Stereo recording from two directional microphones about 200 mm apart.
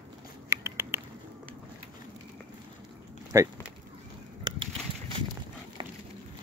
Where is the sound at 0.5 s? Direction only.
15° right (ahead or behind).